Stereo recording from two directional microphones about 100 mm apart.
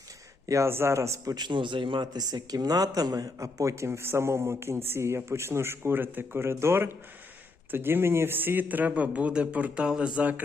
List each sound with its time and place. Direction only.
0.4 s a man's voice: 30° right (ahead or behind)